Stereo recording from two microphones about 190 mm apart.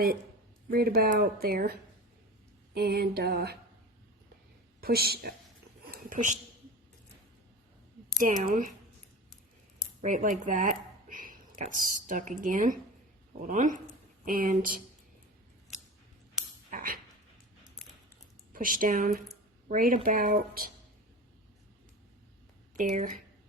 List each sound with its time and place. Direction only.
0.7 s speech: 50° right (ahead or behind)
2.7 s a sound: 55° right (ahead or behind)
4.8 s speech: 55° right (ahead or behind)
5.8 s a sound: 50° right (ahead or behind)
8.2 s speech: 45° right (ahead or behind)
10.0 s speech: 40° right (ahead or behind)
16.6 s dog: 50° right (ahead or behind)
18.5 s speech: 45° right (ahead or behind)
22.8 s speech: 40° right (ahead or behind)